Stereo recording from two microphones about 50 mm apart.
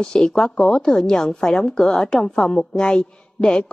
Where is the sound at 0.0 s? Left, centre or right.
Centre.